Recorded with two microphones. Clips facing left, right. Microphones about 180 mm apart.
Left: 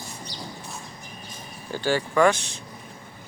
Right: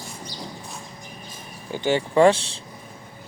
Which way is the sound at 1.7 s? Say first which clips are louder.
Right 3 dB; 20° right (ahead or behind).